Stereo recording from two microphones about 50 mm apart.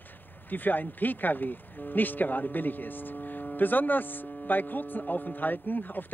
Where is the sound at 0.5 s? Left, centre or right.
Left.